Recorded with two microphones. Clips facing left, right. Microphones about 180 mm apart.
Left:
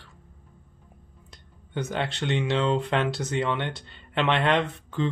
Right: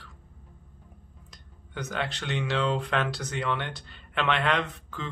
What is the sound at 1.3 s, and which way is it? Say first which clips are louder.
Speech: left 7 dB; 25° left (ahead or behind).